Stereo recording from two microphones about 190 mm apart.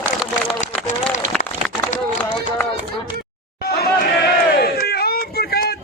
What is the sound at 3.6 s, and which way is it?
Crowd, 55° left (ahead or behind).